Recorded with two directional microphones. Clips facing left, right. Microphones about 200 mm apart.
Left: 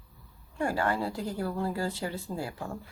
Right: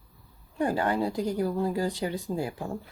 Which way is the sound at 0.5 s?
20° right (ahead or behind).